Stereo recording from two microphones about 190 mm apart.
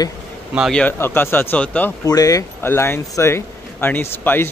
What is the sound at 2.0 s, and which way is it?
Speech, 20° left (ahead or behind).